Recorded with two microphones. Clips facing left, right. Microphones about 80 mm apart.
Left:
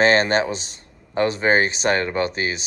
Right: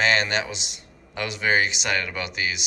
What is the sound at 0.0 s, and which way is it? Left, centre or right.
Speech, left.